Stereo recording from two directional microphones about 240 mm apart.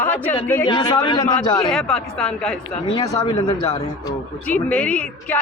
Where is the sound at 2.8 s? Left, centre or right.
Centre.